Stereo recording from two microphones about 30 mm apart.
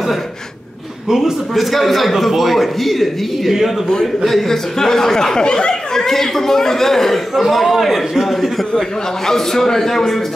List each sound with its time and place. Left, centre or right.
1.0 s a man's voice: centre
1.5 s a man's voice: centre
5.4 s speech: left
6.0 s a man's voice: centre
8.7 s a man's voice: centre